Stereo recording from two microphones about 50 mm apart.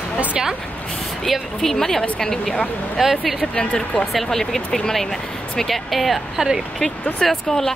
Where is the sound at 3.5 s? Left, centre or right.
Centre.